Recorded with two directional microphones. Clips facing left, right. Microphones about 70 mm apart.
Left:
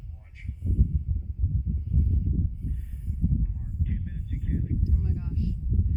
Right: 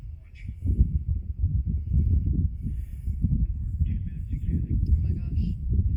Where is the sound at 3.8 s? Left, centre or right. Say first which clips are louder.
Even; left.